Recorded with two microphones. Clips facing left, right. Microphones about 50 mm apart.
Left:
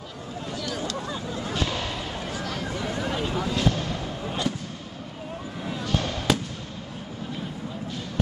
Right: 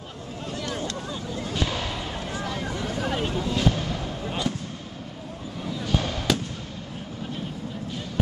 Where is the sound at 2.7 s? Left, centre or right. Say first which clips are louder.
Even; centre.